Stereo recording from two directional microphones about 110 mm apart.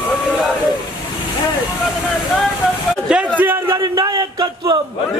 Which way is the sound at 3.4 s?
20° right (ahead or behind).